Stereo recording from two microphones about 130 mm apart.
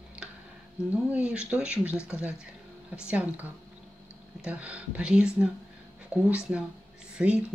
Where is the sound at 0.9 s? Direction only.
10° right (ahead or behind).